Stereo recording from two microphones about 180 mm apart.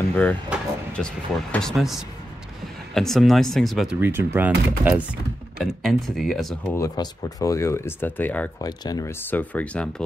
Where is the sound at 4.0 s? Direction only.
15° right (ahead or behind).